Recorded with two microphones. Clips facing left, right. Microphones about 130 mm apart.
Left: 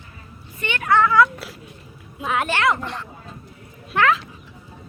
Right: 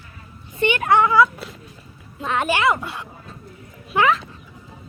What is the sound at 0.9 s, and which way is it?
Speech, 15° right (ahead or behind).